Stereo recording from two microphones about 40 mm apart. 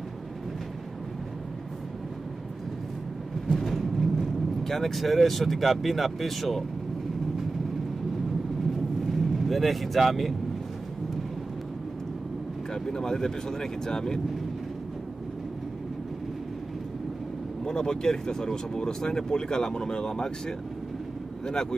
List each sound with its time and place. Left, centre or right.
3.5 s speech: centre
8.7 s vehicle: centre
12.7 s speech: centre
17.6 s speech: centre